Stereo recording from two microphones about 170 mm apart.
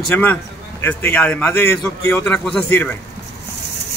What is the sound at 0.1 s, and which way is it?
A man's voice, 10° left (ahead or behind).